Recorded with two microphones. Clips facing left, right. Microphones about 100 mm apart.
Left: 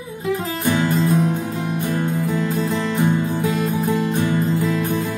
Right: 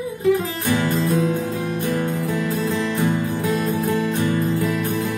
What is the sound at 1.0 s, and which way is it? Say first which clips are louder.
Music: left 1 dB; 15° left (ahead or behind).